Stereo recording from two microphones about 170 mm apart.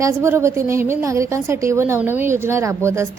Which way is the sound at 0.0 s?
15° right (ahead or behind).